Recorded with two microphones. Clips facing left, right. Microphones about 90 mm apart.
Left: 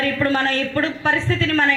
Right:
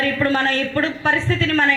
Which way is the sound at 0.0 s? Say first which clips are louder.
Right 1 dB; 25° right (ahead or behind).